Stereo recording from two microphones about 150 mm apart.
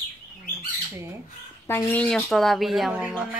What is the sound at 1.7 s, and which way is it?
Speech, 15° left (ahead or behind).